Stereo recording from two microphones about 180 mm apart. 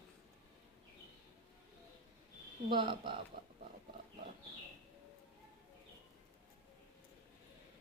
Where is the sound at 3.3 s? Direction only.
55° right (ahead or behind).